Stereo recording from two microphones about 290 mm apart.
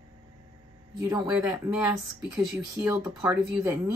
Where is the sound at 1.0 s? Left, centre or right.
Centre.